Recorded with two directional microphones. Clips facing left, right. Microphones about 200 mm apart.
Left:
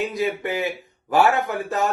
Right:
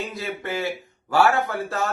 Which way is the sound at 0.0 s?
15° left (ahead or behind).